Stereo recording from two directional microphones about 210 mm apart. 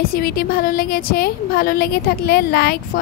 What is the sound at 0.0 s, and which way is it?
A woman's voice, 45° left (ahead or behind).